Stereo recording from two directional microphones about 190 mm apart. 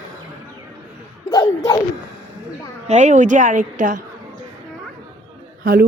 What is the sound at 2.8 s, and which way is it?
A woman's voice, 35° right (ahead or behind).